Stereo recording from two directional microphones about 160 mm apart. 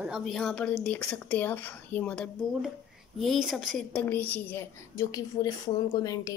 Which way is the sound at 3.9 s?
10° left (ahead or behind).